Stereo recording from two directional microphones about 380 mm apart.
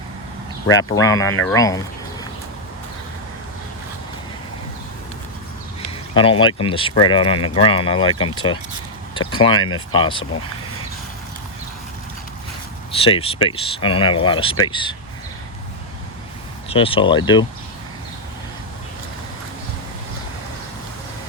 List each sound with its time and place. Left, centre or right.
0.9 s speech: centre
6.1 s speech: centre
7.3 s speech: left
7.6 s speech: centre
9.5 s speech: left
9.9 s speech: centre
13.0 s speech: centre
16.6 s speech: centre